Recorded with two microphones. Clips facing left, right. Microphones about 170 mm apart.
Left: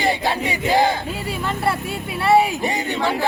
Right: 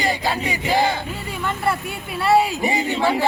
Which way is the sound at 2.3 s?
20° left (ahead or behind).